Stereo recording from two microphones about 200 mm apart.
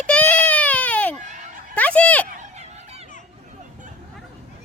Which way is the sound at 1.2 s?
40° right (ahead or behind).